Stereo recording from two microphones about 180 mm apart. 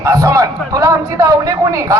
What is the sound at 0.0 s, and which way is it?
A man's voice, 20° right (ahead or behind).